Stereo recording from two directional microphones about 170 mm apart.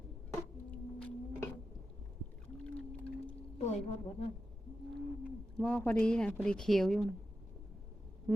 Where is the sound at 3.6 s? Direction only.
40° left (ahead or behind).